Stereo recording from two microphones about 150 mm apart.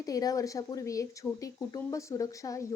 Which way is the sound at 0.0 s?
25° left (ahead or behind).